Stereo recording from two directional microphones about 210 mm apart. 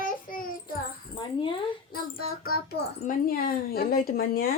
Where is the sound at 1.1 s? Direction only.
25° left (ahead or behind).